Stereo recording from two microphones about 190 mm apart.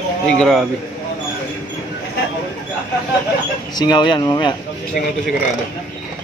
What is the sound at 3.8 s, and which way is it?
Speech, 25° left (ahead or behind).